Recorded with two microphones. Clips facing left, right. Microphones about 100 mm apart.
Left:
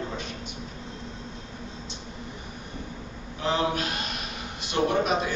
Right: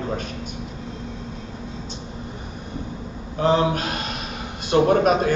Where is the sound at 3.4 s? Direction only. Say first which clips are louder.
Right 7 dB; 45° right (ahead or behind).